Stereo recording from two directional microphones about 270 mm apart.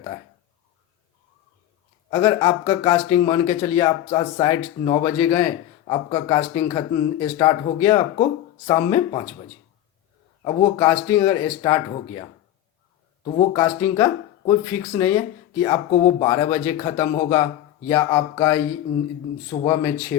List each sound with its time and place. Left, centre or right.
2.0 s a man's voice: centre
10.4 s a man's voice: centre
13.2 s a man's voice: centre